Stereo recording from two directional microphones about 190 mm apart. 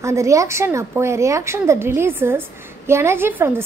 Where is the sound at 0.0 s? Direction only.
15° right (ahead or behind).